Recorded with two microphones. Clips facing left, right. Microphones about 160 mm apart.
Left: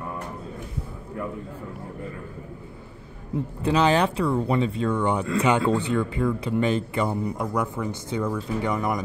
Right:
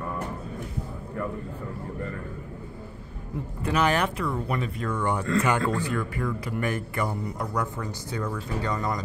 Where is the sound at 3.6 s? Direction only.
30° left (ahead or behind).